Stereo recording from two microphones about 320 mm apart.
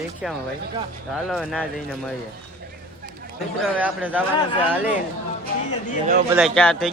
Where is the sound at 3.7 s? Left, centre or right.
Centre.